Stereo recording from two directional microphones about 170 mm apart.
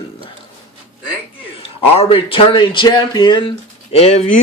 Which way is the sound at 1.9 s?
30° left (ahead or behind).